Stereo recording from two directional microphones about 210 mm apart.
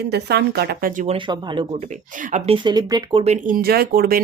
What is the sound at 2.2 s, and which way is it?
Speech, 35° right (ahead or behind).